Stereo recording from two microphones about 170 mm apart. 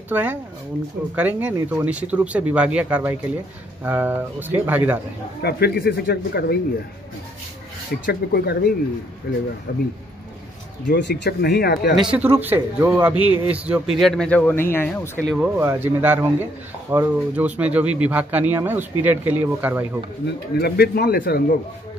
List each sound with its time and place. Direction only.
0.1 s speech: 10° right (ahead or behind)
5.4 s speech: 65° left (ahead or behind)
8.0 s speech: 70° left (ahead or behind)
10.9 s speech: 85° left; by 12.0 s 70° left (ahead or behind)
12.0 s speech: 10° right (ahead or behind)
13.1 s a man's voice: 30° left (ahead or behind)
13.5 s speech: 5° right (ahead or behind); by 15.0 s 15° left (ahead or behind)
15.2 s speech: 5° right (ahead or behind)
20.5 s a man's voice: 70° left (ahead or behind)